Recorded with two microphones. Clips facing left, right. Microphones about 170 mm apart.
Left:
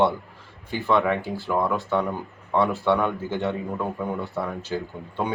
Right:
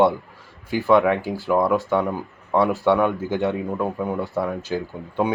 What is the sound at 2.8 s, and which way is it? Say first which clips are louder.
Speech: right 4 dB; 10° right (ahead or behind).